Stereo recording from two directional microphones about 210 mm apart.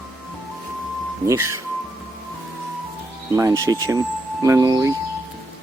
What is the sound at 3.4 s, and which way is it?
Speech, 15° right (ahead or behind).